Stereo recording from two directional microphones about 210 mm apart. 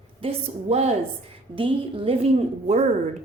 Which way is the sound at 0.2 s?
30° right (ahead or behind).